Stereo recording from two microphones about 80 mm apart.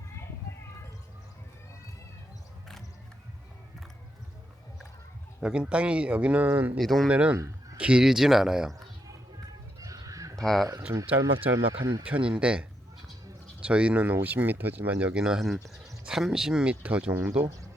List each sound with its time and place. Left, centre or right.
5.4 s speech: centre
6.5 s speech: right
6.7 s speech: centre
7.1 s speech: centre
7.3 s a sound: right
7.8 s speech: centre
9.8 s bird: right
10.3 s speech: centre
11.8 s speech: right
12.0 s speech: centre
15.1 s speech: centre
17.4 s speech: right